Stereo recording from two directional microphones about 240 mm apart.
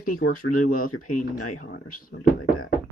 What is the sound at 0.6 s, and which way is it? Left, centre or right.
Speech, left.